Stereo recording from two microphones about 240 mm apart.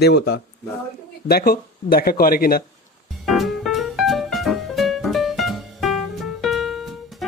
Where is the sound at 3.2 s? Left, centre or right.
Centre.